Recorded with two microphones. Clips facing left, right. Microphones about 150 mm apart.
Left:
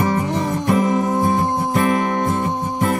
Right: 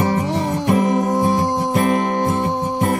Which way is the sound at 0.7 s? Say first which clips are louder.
Right 1 dB; 50° right (ahead or behind).